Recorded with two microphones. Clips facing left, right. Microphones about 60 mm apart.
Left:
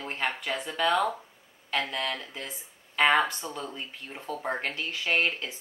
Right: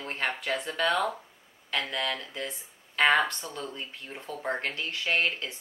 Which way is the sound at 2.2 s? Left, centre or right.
Centre.